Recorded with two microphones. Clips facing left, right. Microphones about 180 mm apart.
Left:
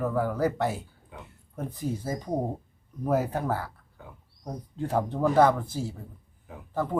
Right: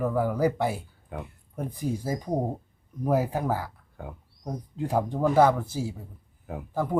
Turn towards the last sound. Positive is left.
turn(degrees=-10)  # may be behind; listen again after turning